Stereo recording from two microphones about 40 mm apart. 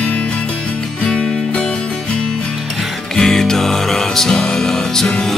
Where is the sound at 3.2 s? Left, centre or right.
Centre.